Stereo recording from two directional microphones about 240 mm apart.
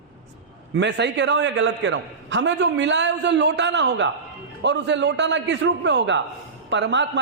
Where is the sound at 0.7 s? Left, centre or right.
Right.